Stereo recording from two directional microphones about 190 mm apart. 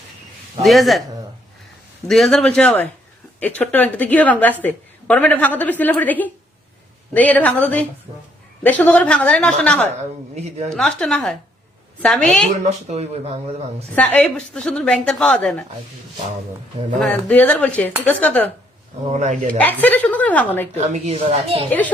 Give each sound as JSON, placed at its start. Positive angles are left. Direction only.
{"t": 0.6, "sound": "a woman's voice", "side_deg": 0}
{"t": 2.0, "sound": "a woman's voice", "side_deg": 0}
{"t": 12.6, "sound": "speech", "side_deg": -35}
{"t": 13.9, "sound": "a woman's voice", "side_deg": 5}
{"t": 17.0, "sound": "a woman's voice", "side_deg": 5}
{"t": 19.0, "sound": "speech", "side_deg": -40}
{"t": 19.5, "sound": "a woman's voice", "side_deg": 10}
{"t": 20.8, "sound": "speech", "side_deg": -35}
{"t": 21.7, "sound": "a woman's voice", "side_deg": 10}